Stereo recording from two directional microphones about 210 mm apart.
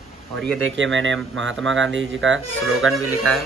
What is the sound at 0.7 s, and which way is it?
Speech, 60° right (ahead or behind).